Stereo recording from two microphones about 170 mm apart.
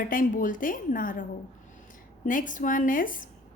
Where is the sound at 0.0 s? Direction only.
55° left (ahead or behind).